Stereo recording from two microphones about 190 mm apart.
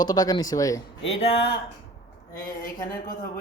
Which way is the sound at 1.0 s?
70° left (ahead or behind).